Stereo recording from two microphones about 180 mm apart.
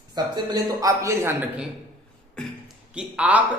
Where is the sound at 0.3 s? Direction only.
20° right (ahead or behind).